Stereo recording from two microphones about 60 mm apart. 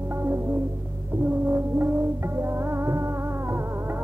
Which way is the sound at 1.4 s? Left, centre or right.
Right.